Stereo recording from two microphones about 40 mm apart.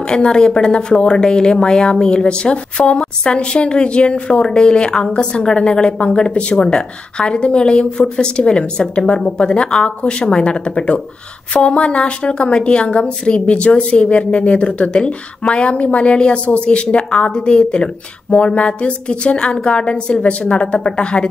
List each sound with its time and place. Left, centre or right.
0.0 s a woman's voice: centre